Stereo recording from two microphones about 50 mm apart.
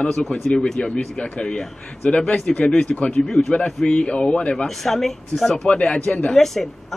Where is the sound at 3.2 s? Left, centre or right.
Centre.